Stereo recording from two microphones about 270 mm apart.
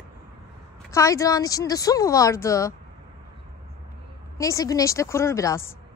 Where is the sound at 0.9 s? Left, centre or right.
Centre.